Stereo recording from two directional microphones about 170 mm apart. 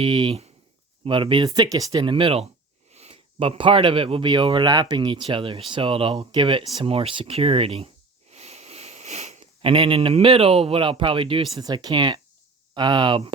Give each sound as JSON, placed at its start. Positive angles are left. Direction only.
{"t": 0.0, "sound": "speech", "side_deg": -30}
{"t": 8.3, "sound": "sniff", "side_deg": -40}
{"t": 11.5, "sound": "speech", "side_deg": -25}